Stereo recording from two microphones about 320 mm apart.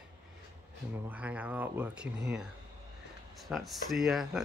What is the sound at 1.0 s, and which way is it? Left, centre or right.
Speech, centre.